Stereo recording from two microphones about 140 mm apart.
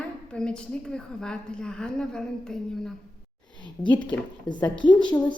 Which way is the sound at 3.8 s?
35° left (ahead or behind).